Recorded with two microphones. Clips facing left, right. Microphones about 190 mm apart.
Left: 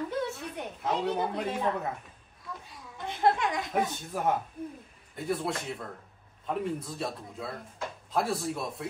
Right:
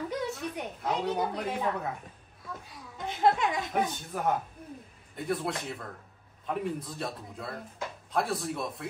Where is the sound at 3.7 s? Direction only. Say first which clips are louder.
Even; centre (ahead or behind).